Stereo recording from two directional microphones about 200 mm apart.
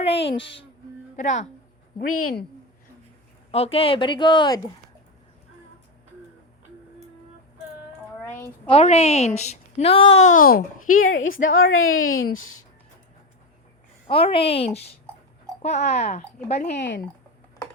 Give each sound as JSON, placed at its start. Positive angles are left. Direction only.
{"t": 0.0, "sound": "a woman's voice", "side_deg": 30}
{"t": 3.5, "sound": "speech", "side_deg": 30}
{"t": 8.6, "sound": "a woman's voice", "side_deg": 30}
{"t": 10.5, "sound": "a child's voice", "side_deg": 45}
{"t": 11.3, "sound": "a woman's voice", "side_deg": 80}
{"t": 14.1, "sound": "a woman's voice", "side_deg": 30}
{"t": 16.7, "sound": "speech", "side_deg": 65}